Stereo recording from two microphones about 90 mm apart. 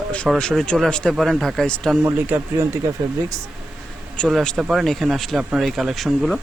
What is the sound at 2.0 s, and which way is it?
Speech, 25° right (ahead or behind).